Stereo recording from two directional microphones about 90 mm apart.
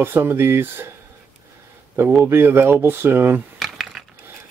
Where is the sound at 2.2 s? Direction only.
25° right (ahead or behind).